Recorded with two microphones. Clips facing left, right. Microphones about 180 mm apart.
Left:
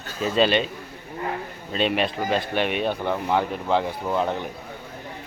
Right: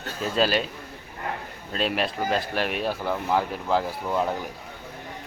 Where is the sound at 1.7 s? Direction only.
Centre (ahead or behind).